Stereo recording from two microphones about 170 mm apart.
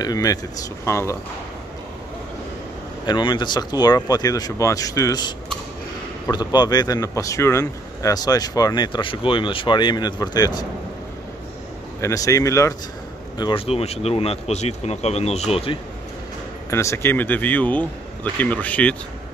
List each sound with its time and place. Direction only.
0.0 s speech: 20° left (ahead or behind)
3.1 s speech: 25° left (ahead or behind)
6.3 s speech: 25° left (ahead or behind)
12.0 s speech: 20° left (ahead or behind)
13.4 s speech: 30° left (ahead or behind)
16.7 s speech: 15° left (ahead or behind)